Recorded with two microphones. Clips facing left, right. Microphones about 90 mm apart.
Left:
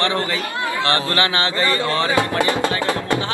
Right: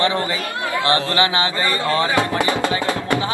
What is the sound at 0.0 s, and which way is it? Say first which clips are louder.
Speech: right 1 dB; 20° right (ahead or behind).